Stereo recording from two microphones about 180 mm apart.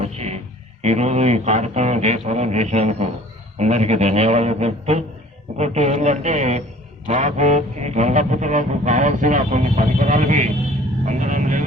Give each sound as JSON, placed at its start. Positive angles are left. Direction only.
{"t": 0.0, "sound": "speech", "side_deg": -35}